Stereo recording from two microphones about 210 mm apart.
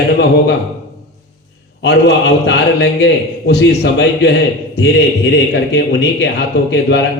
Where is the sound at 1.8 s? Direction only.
55° left (ahead or behind).